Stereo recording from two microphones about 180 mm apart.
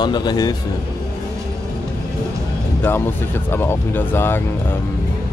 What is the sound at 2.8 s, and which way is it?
Speech, 10° left (ahead or behind).